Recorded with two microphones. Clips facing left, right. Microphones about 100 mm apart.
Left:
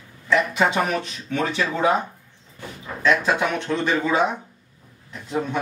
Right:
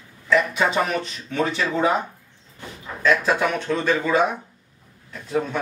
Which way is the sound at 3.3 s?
15° left (ahead or behind).